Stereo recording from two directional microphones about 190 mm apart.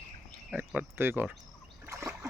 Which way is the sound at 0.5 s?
10° right (ahead or behind).